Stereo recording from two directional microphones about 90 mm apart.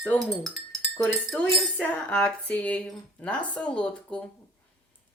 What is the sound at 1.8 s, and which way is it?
Speech, 15° left (ahead or behind).